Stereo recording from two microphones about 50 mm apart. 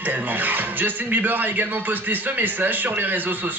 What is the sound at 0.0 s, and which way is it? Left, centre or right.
Speech, right.